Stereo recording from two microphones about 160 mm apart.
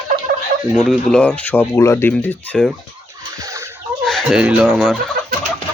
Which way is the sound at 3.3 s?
20° right (ahead or behind).